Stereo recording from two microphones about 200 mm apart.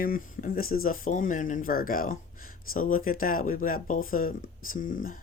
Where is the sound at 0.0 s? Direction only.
45° left (ahead or behind).